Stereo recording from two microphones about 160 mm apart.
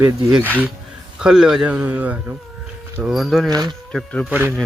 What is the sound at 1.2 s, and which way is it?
Speech, 5° right (ahead or behind).